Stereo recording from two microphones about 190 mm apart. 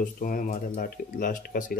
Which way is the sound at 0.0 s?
45° left (ahead or behind).